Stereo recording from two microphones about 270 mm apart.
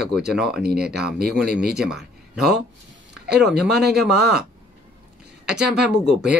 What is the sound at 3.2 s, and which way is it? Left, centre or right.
Speech, right.